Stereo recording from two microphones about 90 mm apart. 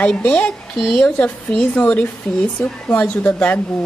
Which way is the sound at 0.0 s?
15° left (ahead or behind).